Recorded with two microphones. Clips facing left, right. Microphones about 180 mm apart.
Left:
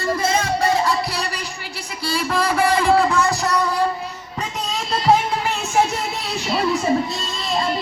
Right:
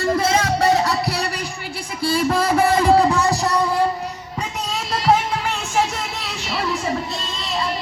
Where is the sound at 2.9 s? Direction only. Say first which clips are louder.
Right 2 dB; 20° right (ahead or behind).